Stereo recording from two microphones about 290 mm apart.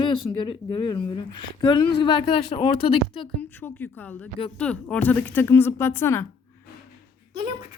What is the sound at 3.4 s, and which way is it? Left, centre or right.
A woman's voice, centre.